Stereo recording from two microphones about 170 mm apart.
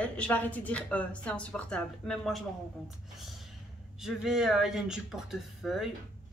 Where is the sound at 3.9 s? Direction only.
Centre (ahead or behind).